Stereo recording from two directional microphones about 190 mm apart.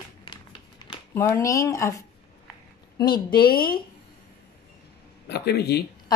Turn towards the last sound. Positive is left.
turn(degrees=60)  # may be behind; listen again after turning